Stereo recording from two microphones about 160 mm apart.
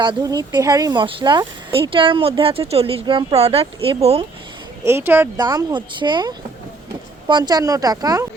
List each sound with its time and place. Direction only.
0.0 s speech: 30° right (ahead or behind)
4.9 s speech: 15° right (ahead or behind)
5.4 s speech: 25° right (ahead or behind)